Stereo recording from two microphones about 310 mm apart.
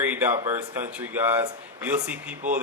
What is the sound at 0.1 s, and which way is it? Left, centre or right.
Speech, centre.